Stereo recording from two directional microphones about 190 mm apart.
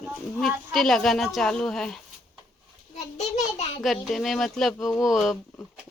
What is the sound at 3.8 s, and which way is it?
A woman's voice, centre (ahead or behind).